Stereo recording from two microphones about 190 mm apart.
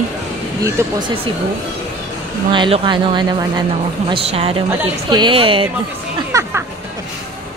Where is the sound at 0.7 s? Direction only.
15° right (ahead or behind).